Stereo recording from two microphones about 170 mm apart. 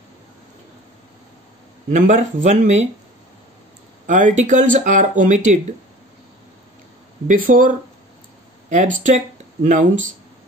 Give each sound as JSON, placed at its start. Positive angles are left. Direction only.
{"t": 1.9, "sound": "speech", "side_deg": -45}
{"t": 4.2, "sound": "speech", "side_deg": -45}
{"t": 7.2, "sound": "speech", "side_deg": -55}